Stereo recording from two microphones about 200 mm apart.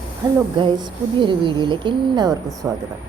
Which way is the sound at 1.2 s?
25° right (ahead or behind).